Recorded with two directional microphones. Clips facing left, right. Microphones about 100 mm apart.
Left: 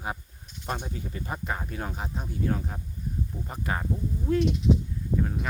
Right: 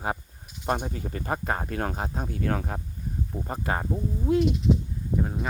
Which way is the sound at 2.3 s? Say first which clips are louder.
Even; 65° right (ahead or behind).